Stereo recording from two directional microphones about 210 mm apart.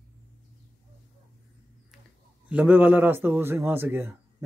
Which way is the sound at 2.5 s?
10° right (ahead or behind).